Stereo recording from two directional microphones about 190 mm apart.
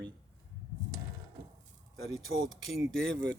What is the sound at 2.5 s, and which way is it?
Speech, centre (ahead or behind).